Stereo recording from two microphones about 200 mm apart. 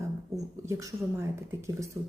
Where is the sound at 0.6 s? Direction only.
15° right (ahead or behind).